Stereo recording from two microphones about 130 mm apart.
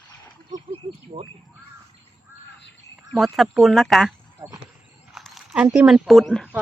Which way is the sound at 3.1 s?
Centre (ahead or behind).